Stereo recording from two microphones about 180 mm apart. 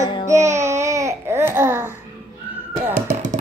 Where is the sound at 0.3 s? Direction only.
15° right (ahead or behind).